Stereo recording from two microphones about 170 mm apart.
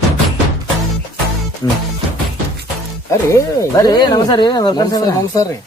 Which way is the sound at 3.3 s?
20° left (ahead or behind).